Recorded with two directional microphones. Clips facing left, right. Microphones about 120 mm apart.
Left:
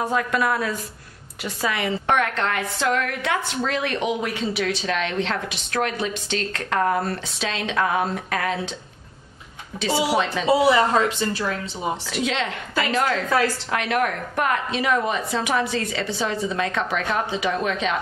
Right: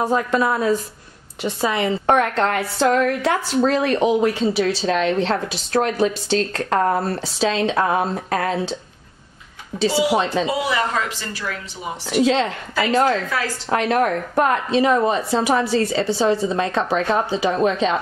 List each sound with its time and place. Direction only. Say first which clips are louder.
0.0 s a woman's voice: right 3 dB; 30° right (ahead or behind)
9.8 s a woman's voice: right 3 dB; 35° right (ahead or behind)
10.4 s speech: left 4 dB; 30° left (ahead or behind)
12.1 s a woman's voice: right 7 dB; 35° right (ahead or behind)